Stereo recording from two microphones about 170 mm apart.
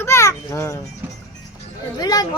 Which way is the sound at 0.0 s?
15° left (ahead or behind).